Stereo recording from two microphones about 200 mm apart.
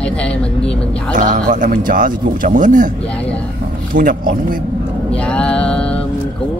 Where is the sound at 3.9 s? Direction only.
45° right (ahead or behind).